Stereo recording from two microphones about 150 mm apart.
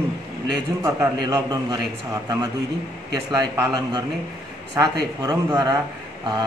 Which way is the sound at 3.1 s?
25° right (ahead or behind).